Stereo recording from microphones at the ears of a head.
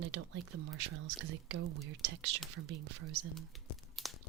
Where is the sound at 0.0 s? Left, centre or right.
Right.